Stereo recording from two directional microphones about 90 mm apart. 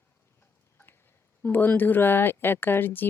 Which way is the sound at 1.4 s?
20° left (ahead or behind).